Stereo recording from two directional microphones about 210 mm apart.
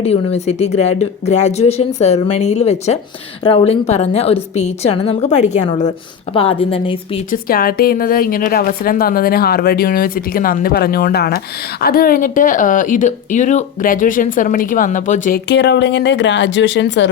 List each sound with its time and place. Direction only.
0.0 s a woman's voice: 30° left (ahead or behind)
7.3 s a woman's voice: 45° left (ahead or behind)
15.4 s speech: 55° left (ahead or behind)